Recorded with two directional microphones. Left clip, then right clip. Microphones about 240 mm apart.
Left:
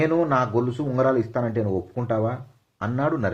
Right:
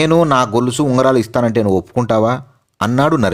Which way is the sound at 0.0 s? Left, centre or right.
Right.